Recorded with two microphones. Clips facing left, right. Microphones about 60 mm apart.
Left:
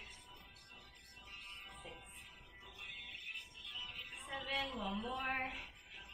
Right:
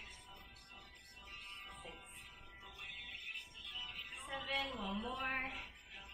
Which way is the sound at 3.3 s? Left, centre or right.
Right.